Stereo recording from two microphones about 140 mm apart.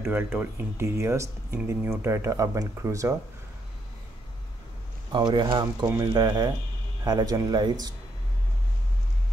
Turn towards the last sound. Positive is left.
turn(degrees=-30)  # may be behind; listen again after turning